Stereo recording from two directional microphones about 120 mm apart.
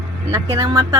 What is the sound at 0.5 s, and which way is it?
Speech, 30° right (ahead or behind).